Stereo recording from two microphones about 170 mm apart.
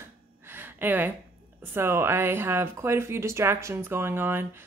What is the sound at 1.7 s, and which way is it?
Speech, 15° right (ahead or behind).